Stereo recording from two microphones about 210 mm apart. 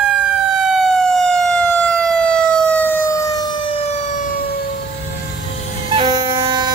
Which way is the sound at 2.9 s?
15° left (ahead or behind).